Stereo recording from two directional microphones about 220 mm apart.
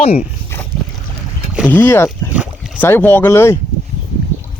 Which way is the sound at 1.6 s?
10° left (ahead or behind).